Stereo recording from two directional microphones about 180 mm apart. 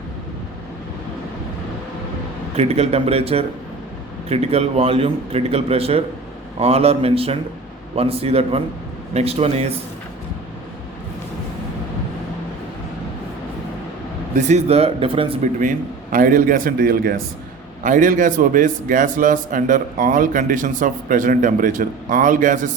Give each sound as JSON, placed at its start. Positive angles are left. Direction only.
{"t": 2.6, "sound": "a man's voice", "side_deg": -35}
{"t": 14.3, "sound": "a man's voice", "side_deg": -40}
{"t": 16.1, "sound": "a man's voice", "side_deg": -50}